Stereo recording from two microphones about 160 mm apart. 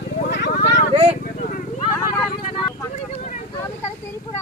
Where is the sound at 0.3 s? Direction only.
90° left.